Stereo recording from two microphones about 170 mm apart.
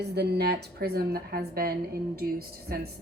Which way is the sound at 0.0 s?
75° right (ahead or behind).